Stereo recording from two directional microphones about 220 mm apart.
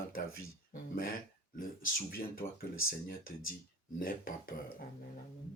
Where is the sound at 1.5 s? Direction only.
40° left (ahead or behind).